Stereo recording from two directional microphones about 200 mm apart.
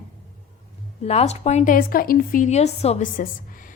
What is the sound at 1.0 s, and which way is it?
A woman's voice, 30° left (ahead or behind).